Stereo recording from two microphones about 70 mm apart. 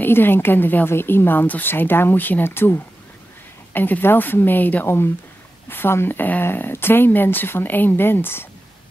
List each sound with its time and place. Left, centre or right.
0.0 s speech: left